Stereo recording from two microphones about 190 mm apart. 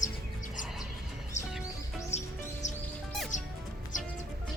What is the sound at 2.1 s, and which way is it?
Music, 15° left (ahead or behind).